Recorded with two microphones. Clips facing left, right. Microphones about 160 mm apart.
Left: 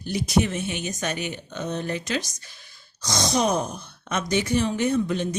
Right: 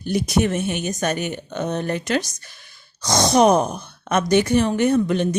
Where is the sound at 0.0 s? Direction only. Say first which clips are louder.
Right 3 dB; 55° right (ahead or behind).